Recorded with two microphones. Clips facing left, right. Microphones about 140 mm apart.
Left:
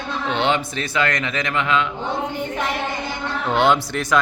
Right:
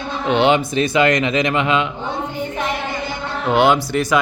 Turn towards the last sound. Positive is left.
turn(degrees=-5)  # may be behind; listen again after turning